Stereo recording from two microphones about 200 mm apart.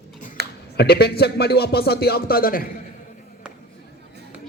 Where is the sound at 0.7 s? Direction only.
55° left (ahead or behind).